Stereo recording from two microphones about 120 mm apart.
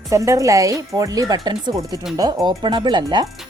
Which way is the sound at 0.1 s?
25° right (ahead or behind).